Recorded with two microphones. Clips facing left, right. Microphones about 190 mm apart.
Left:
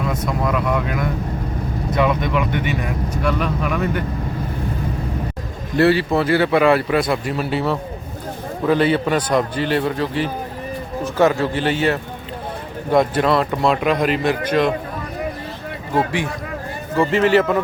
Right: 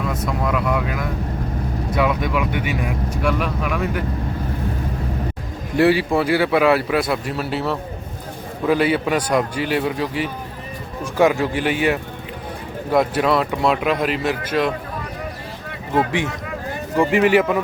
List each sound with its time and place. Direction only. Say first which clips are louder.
0.3 s speech: even; centre (ahead or behind)
5.7 s a man's voice: even; 10° right (ahead or behind)
16.0 s a man's voice: even; 20° right (ahead or behind)